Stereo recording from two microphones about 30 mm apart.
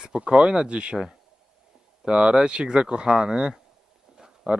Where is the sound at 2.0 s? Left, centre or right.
Right.